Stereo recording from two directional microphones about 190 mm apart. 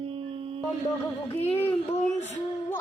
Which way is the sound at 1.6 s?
35° left (ahead or behind).